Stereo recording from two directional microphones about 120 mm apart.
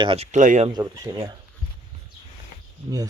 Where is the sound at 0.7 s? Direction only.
35° right (ahead or behind).